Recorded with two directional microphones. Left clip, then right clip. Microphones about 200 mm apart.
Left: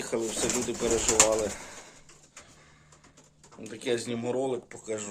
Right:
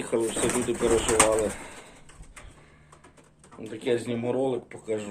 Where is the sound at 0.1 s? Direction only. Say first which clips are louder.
Right 5 dB; 5° left (ahead or behind).